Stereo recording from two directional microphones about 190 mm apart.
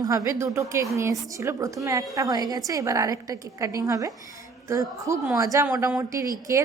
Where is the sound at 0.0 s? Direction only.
20° right (ahead or behind).